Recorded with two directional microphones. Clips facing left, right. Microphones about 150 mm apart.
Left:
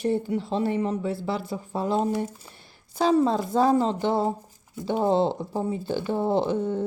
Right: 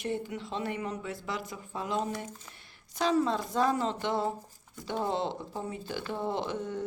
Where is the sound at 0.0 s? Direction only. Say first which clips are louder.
Left 9 dB; 35° left (ahead or behind).